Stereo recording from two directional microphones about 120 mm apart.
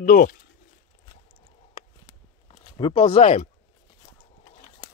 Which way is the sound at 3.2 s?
65° left (ahead or behind).